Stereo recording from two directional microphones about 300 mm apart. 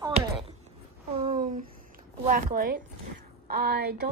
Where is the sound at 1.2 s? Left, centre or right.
Right.